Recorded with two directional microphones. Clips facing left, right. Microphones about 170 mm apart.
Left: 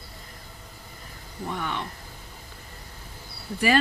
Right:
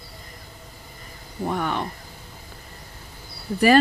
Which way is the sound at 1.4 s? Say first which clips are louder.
Right 6 dB; 45° right (ahead or behind).